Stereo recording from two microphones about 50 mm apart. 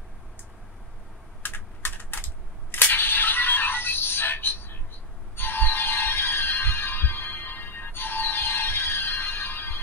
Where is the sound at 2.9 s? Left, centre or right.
Left.